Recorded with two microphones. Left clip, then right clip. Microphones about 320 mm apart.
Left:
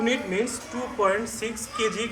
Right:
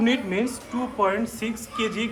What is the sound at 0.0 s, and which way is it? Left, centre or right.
A man's voice, right.